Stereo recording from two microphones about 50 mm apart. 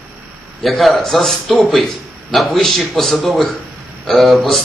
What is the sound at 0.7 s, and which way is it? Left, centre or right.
A man's voice, centre.